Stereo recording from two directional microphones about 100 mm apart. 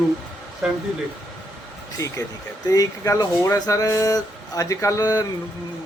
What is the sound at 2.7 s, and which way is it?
Speech, 35° left (ahead or behind).